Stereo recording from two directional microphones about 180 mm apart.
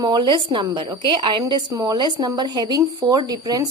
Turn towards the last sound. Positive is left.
turn(degrees=-20)  # may be behind; listen again after turning